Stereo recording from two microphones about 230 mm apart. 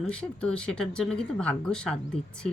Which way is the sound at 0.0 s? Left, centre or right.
Centre.